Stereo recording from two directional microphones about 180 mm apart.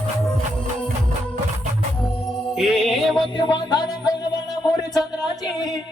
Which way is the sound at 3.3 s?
25° left (ahead or behind).